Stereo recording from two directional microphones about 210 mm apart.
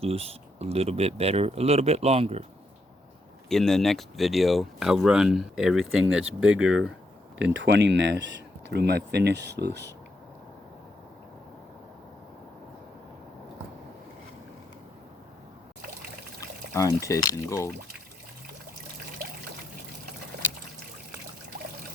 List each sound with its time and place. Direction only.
0.0 s speech: 30° right (ahead or behind)
3.5 s speech: centre (ahead or behind)
7.3 s speech: 60° right (ahead or behind)
16.7 s speech: 15° left (ahead or behind)